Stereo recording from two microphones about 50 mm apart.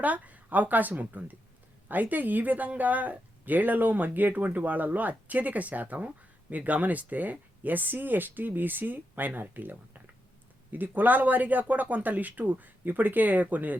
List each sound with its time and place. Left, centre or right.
0.0 s speech: right